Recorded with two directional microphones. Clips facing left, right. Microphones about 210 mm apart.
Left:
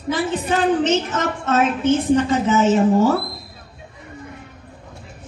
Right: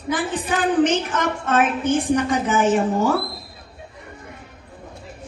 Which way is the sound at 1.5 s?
25° left (ahead or behind).